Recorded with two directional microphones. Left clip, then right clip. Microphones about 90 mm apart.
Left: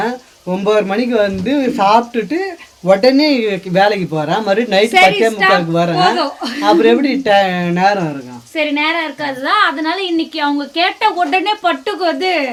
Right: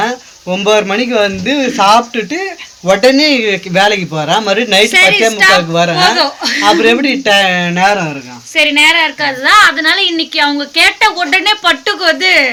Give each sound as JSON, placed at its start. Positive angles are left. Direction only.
{"t": 0.5, "sound": "a man's voice", "side_deg": -10}
{"t": 6.1, "sound": "speech", "side_deg": 35}
{"t": 6.6, "sound": "a man's voice", "side_deg": -15}
{"t": 8.5, "sound": "a woman's voice", "side_deg": 20}